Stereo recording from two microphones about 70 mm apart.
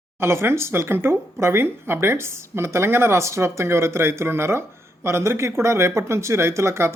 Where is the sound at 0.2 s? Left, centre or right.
Right.